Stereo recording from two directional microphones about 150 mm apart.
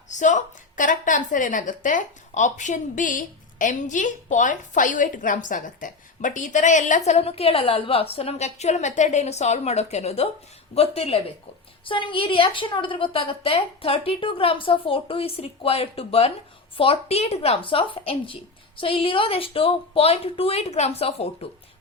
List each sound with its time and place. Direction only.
0.1 s a woman's voice: 55° left (ahead or behind)